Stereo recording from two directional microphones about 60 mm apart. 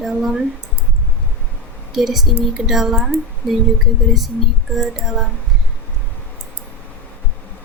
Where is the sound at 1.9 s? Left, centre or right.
Centre.